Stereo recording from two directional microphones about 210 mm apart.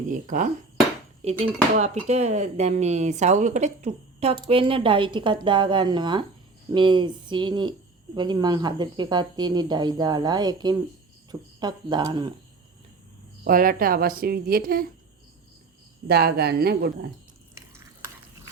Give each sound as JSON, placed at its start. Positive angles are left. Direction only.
{"t": 0.1, "sound": "speech", "side_deg": -40}
{"t": 13.4, "sound": "a woman's voice", "side_deg": -40}
{"t": 16.0, "sound": "a woman's voice", "side_deg": -50}